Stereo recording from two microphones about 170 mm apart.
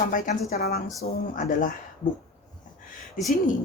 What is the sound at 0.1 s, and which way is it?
Speech, 55° left (ahead or behind).